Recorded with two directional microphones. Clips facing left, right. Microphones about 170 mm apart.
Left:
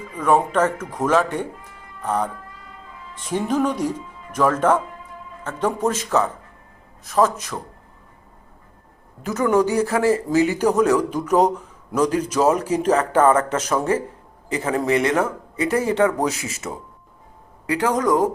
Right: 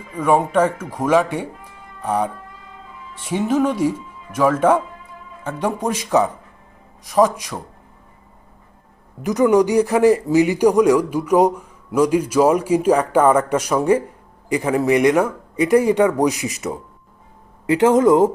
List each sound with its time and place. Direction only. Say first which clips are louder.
0.2 s speech: right 2 dB; 10° right (ahead or behind)
9.2 s speech: right 4 dB; 15° right (ahead or behind)